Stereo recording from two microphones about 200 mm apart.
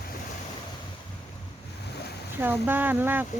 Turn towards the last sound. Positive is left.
turn(degrees=-10)  # may be behind; listen again after turning